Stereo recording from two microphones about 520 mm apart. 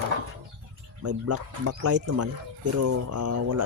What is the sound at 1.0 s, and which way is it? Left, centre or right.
Speech, right.